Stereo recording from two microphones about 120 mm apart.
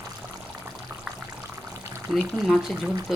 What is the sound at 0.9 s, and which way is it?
Water, 25° right (ahead or behind).